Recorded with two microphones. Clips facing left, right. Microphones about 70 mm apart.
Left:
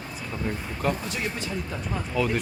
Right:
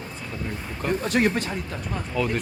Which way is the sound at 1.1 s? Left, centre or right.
Right.